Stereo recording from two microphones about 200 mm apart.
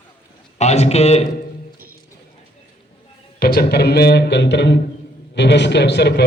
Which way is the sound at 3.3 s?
50° left (ahead or behind).